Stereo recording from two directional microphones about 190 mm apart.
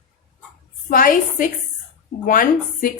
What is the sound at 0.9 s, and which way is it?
A woman's voice, 45° left (ahead or behind).